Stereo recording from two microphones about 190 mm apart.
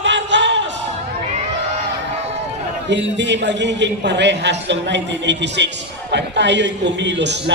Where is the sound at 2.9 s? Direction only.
70° right (ahead or behind).